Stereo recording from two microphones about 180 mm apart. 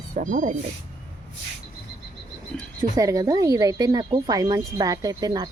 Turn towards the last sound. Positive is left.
turn(degrees=-20)  # may be behind; listen again after turning